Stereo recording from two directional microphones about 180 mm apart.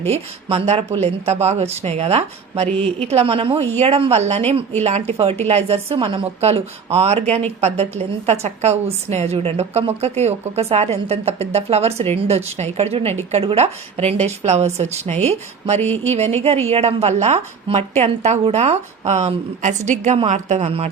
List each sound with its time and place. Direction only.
0.0 s speech: 35° right (ahead or behind)
2.7 s speech: 5° left (ahead or behind)
3.1 s speech: 35° right (ahead or behind)